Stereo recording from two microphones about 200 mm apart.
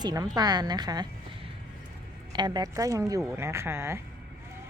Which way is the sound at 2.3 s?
20° right (ahead or behind).